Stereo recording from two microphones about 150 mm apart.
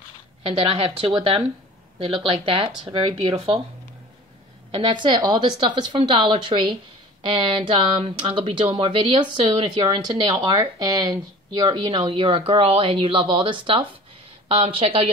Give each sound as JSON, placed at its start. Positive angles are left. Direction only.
{"t": 0.5, "sound": "speech", "side_deg": -40}
{"t": 4.6, "sound": "speech", "side_deg": -35}